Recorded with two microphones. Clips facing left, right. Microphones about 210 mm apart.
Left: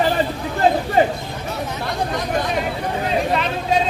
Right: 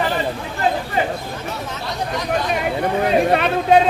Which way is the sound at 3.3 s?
60° right (ahead or behind).